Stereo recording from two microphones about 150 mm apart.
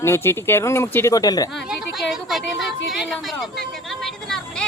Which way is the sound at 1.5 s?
Centre (ahead or behind).